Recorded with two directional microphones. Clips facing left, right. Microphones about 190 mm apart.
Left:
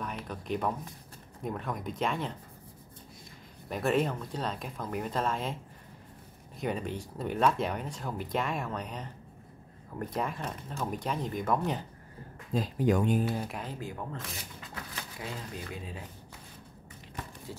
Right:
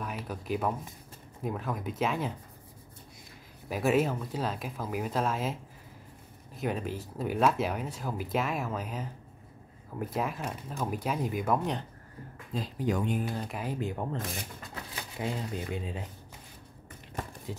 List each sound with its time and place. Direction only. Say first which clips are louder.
0.0 s speech: right 1 dB; 5° right (ahead or behind)
3.6 s speech: right 2 dB; 5° right (ahead or behind)
12.5 s speech: left 4 dB; 50° left (ahead or behind)
13.5 s speech: right 4 dB; 5° right (ahead or behind)
13.7 s speech: right 5 dB; 20° right (ahead or behind)
15.1 s speech: right 7 dB; 25° right (ahead or behind)
17.5 s speech: right 4 dB; 15° right (ahead or behind)